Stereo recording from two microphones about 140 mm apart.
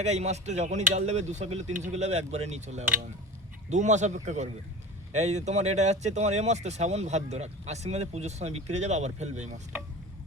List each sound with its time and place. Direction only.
0.0 s a man's voice: 50° right (ahead or behind)